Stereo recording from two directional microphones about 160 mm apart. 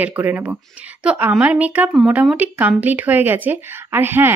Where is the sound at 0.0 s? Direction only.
10° right (ahead or behind).